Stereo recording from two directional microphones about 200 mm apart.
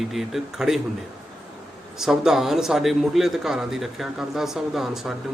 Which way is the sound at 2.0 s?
Centre (ahead or behind).